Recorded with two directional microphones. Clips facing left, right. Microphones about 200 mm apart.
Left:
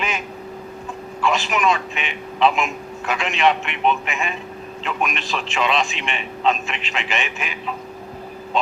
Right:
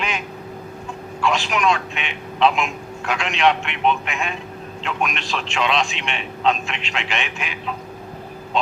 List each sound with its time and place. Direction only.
1.2 s a man's voice: centre (ahead or behind)